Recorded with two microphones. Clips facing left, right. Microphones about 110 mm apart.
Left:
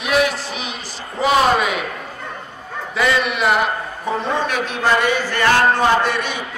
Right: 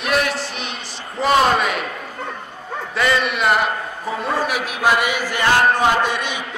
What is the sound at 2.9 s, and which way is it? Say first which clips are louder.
A man's voice: left 1 dB; centre (ahead or behind).